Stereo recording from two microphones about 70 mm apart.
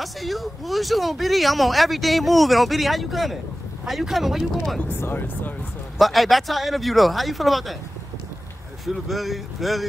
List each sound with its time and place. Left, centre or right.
0.0 s speech: centre
4.8 s speech: left
5.9 s speech: centre
8.8 s speech: centre